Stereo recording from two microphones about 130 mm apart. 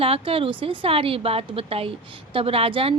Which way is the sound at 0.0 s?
45° right (ahead or behind).